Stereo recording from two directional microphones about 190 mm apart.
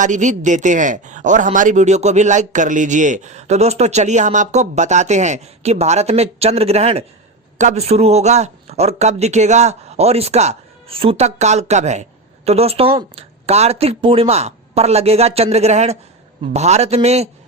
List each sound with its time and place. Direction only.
0.0 s speech: 40° right (ahead or behind)